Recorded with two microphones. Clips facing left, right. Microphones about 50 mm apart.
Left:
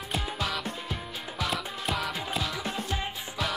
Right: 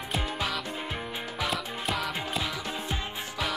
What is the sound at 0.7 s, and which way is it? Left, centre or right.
Music, right.